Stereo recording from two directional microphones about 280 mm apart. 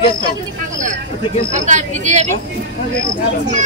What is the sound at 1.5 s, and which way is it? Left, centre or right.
Speech, right.